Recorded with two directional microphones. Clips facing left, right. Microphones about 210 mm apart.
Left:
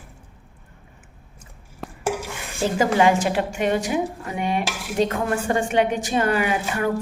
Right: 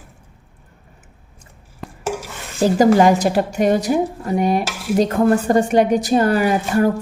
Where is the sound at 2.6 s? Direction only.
40° right (ahead or behind).